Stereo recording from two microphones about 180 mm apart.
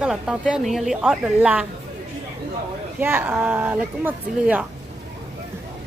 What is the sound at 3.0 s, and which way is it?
Speech, 10° right (ahead or behind).